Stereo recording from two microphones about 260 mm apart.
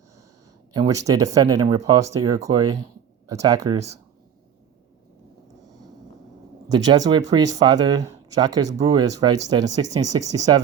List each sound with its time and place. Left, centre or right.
0.7 s speech: centre
6.7 s speech: centre